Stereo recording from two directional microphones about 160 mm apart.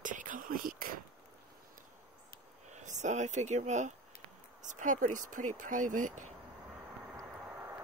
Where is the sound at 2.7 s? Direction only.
50° right (ahead or behind).